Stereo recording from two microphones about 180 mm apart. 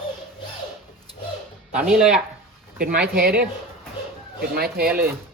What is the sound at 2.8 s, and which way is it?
Speech, 55° right (ahead or behind).